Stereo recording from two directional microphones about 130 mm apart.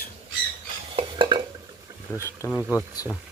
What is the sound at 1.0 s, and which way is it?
Stir, 35° right (ahead or behind).